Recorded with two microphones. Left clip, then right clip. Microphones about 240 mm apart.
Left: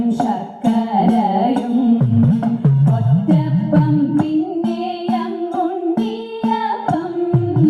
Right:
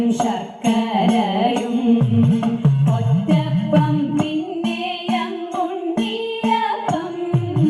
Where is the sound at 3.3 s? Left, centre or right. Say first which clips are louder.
Left 1 dB; left.